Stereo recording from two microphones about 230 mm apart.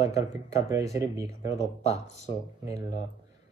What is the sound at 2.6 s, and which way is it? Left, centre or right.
Speech, centre.